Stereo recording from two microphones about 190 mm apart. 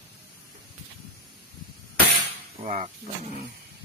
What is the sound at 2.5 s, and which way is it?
Speech, 40° right (ahead or behind).